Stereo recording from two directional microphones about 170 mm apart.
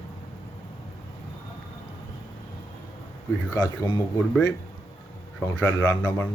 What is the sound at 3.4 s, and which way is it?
Speech, 20° left (ahead or behind).